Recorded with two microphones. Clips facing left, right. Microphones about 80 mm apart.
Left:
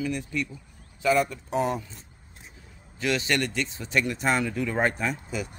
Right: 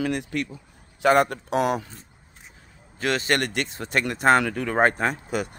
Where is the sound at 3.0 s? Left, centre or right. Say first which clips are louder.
Right 2 dB; right.